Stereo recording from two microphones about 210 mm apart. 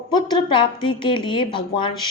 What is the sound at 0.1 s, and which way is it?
A woman's voice, 20° left (ahead or behind).